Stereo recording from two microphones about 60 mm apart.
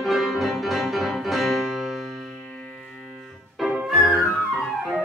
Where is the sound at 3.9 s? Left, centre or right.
Centre.